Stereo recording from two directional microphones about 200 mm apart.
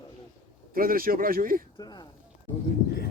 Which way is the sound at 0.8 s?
45° right (ahead or behind).